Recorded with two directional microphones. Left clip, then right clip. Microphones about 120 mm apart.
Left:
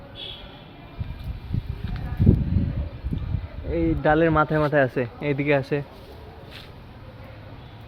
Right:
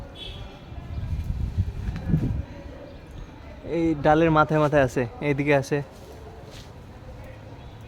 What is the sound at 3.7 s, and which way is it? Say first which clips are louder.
Speech: right 1 dB; 25° right (ahead or behind).